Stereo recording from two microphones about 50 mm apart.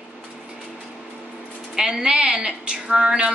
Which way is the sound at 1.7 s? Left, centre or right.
Centre.